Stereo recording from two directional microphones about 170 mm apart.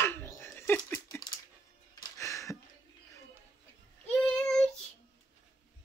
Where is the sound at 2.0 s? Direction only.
20° left (ahead or behind).